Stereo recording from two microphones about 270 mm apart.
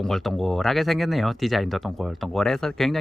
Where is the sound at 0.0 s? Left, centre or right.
Centre.